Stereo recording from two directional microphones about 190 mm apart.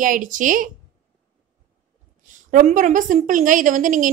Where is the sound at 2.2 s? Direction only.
40° right (ahead or behind).